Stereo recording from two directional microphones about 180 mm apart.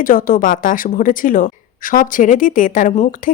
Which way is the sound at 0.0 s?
50° left (ahead or behind).